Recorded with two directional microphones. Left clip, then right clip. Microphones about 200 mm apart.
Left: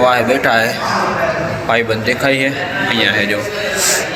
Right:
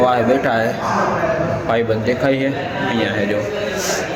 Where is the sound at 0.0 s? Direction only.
15° right (ahead or behind).